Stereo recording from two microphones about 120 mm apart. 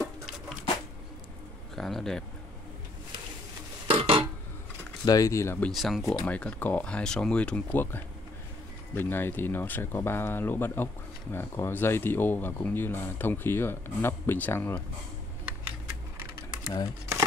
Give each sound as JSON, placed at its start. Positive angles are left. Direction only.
{"t": 1.8, "sound": "speech", "side_deg": 0}
{"t": 3.8, "sound": "a sound", "side_deg": -50}
{"t": 5.0, "sound": "speech", "side_deg": 30}
{"t": 5.7, "sound": "speech", "side_deg": 0}
{"t": 6.2, "sound": "speech", "side_deg": 10}
{"t": 16.6, "sound": "speech", "side_deg": 35}